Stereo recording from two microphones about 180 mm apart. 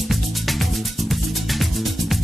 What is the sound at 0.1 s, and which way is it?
Music, centre (ahead or behind).